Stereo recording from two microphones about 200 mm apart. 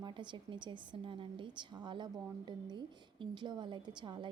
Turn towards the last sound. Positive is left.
turn(degrees=-25)  # may be behind; listen again after turning